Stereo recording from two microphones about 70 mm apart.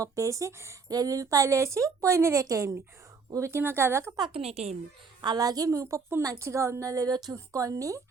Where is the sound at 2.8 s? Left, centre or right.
Right.